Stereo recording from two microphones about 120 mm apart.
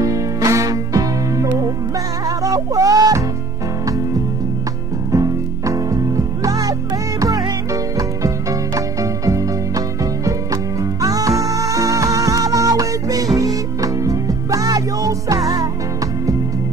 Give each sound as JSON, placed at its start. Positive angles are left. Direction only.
{"t": 0.0, "sound": "music", "side_deg": -30}
{"t": 5.1, "sound": "music", "side_deg": -30}